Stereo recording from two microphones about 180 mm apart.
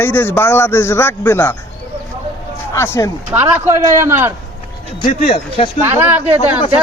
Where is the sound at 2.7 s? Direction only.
15° left (ahead or behind).